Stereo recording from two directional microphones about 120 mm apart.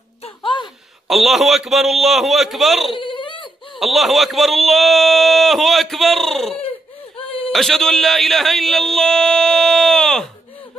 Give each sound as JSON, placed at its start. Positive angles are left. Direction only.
{"t": 0.2, "sound": "a sound", "side_deg": 45}
{"t": 1.0, "sound": "speech", "side_deg": 0}
{"t": 3.0, "sound": "baby cry", "side_deg": 45}
{"t": 3.8, "sound": "speech", "side_deg": 0}
{"t": 7.2, "sound": "a sound", "side_deg": 50}
{"t": 7.5, "sound": "speech", "side_deg": 0}